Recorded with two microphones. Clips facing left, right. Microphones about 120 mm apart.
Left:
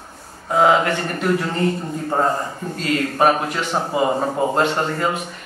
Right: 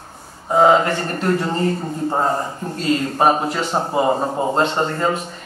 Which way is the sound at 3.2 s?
25° right (ahead or behind).